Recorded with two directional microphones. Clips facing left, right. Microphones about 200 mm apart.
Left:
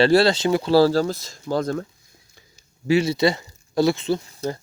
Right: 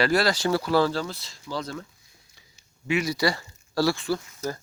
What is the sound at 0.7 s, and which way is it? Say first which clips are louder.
Speech: left 10 dB; 35° left (ahead or behind).